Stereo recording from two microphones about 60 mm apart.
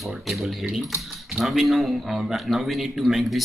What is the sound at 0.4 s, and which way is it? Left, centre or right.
A man's voice, centre.